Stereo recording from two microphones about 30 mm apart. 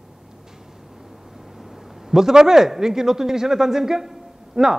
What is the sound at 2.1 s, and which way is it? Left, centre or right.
A man's voice, centre.